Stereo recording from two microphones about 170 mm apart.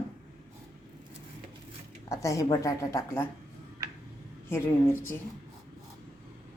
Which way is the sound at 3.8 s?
20° right (ahead or behind).